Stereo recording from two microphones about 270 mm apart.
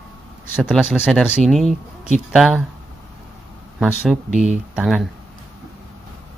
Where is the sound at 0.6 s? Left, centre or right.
Centre.